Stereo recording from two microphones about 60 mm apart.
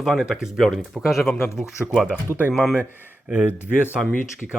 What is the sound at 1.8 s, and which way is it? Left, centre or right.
Speech, right.